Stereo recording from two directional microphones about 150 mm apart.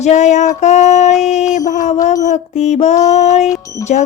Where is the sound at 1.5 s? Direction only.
55° left (ahead or behind).